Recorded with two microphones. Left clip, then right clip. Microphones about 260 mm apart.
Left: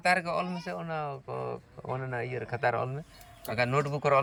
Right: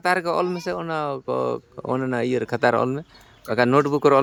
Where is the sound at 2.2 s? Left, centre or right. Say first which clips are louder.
Right 9 dB; right.